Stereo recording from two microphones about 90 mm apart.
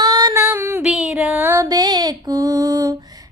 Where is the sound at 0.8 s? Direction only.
5° right (ahead or behind).